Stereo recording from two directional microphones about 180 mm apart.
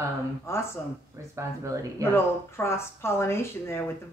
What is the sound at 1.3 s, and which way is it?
Speech, 15° right (ahead or behind).